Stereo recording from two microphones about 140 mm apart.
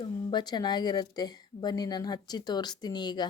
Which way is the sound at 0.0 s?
30° left (ahead or behind).